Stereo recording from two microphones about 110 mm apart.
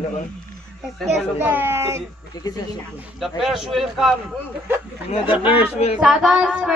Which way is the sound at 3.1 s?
Centre (ahead or behind).